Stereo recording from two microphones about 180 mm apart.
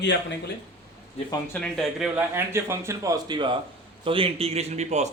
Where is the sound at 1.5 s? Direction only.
5° left (ahead or behind).